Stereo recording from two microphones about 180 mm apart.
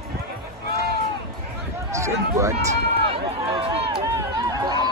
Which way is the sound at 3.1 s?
30° right (ahead or behind).